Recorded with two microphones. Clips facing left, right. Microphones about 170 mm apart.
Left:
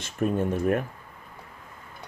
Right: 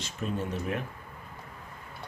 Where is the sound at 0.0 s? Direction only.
50° left (ahead or behind).